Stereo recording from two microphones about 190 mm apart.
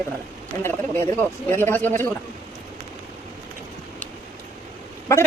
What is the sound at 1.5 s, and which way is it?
Speech, 10° left (ahead or behind).